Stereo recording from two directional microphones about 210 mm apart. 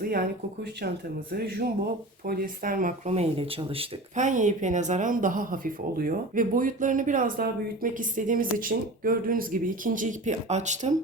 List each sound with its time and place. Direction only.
0.0 s speech: 45° right (ahead or behind)